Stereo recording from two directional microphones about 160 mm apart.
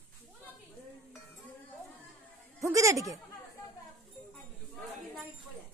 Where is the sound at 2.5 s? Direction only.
20° right (ahead or behind).